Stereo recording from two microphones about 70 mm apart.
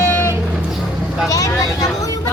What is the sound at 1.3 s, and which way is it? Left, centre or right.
Vehicle, left.